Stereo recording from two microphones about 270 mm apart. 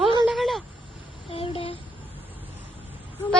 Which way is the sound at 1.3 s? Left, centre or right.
Left.